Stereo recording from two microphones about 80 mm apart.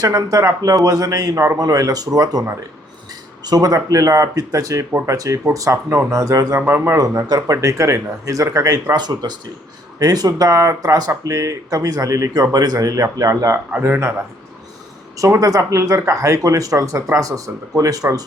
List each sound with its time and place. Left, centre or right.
0.0 s speech: right
3.4 s speech: right
4.9 s speech: right
5.1 s speech: right
6.6 s speech: centre
6.8 s speech: right
12.3 s speech: right
13.8 s speech: right
15.2 s speech: right